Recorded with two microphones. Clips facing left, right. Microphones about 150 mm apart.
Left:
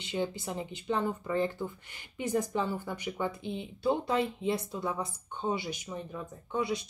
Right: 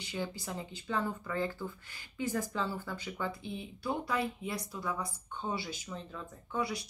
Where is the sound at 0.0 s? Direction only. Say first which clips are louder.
Left 5 dB; 20° left (ahead or behind).